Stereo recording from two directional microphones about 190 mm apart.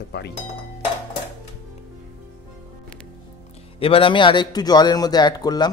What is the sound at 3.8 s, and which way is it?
A man's voice, 30° left (ahead or behind).